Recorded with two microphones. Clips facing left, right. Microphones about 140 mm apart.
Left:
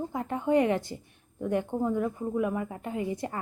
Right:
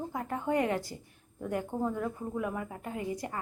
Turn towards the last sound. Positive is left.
turn(degrees=25)  # may be behind; listen again after turning